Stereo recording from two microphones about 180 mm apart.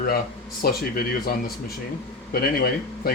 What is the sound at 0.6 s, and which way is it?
Speech, 55° left (ahead or behind).